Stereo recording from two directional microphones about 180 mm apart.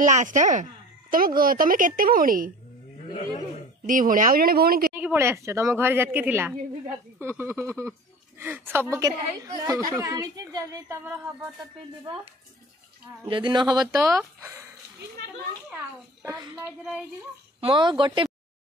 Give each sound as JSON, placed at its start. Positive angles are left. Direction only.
{"t": 0.0, "sound": "a woman's voice", "side_deg": -45}
{"t": 1.1, "sound": "a woman's voice", "side_deg": -55}
{"t": 3.1, "sound": "speech", "side_deg": 45}
{"t": 3.8, "sound": "a woman's voice", "side_deg": -50}
{"t": 4.9, "sound": "a woman's voice", "side_deg": -10}
{"t": 13.2, "sound": "a woman's voice", "side_deg": -25}
{"t": 15.7, "sound": "a child's voice", "side_deg": -15}
{"t": 17.6, "sound": "speech", "side_deg": -30}